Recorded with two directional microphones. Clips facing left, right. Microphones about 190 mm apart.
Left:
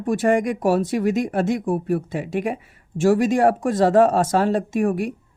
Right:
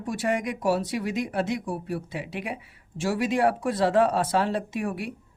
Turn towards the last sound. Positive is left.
turn(degrees=45)  # may be behind; listen again after turning